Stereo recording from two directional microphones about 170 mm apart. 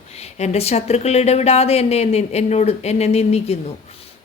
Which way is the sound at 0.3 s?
40° left (ahead or behind).